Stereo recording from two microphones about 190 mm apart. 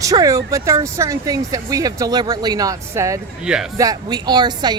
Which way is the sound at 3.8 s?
20° right (ahead or behind).